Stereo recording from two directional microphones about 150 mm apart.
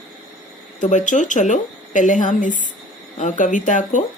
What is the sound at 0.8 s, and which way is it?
Speech, 55° left (ahead or behind).